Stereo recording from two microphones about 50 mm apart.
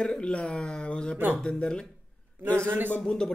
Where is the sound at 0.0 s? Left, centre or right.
Centre.